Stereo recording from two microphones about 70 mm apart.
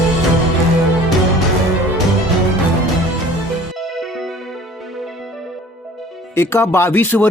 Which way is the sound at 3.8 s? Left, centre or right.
Centre.